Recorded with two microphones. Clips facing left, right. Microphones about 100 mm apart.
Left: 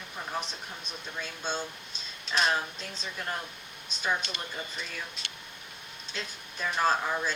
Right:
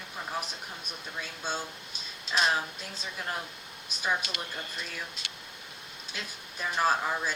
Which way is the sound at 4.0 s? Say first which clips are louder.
Even; 5° right (ahead or behind).